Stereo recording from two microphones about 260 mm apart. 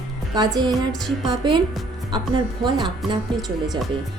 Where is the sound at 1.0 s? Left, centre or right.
Centre.